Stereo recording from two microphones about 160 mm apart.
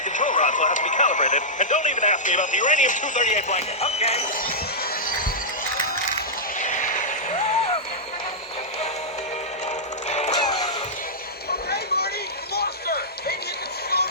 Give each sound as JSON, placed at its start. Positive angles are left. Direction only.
{"t": 0.1, "sound": "speech", "side_deg": 50}
{"t": 6.6, "sound": "a sound", "side_deg": 50}
{"t": 10.1, "sound": "music", "side_deg": 45}
{"t": 10.3, "sound": "music", "side_deg": 25}
{"t": 12.5, "sound": "music", "side_deg": 80}